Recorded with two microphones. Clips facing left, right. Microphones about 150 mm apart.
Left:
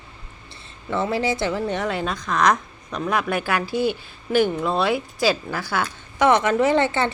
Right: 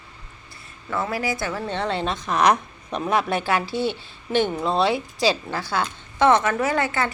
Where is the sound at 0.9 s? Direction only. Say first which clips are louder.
Left 3 dB; 25° left (ahead or behind).